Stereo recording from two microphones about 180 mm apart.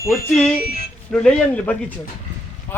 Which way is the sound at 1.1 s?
5° left (ahead or behind).